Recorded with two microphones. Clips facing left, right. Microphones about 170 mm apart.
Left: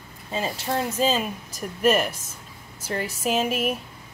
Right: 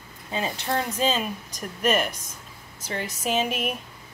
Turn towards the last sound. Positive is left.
turn(degrees=5)  # may be behind; listen again after turning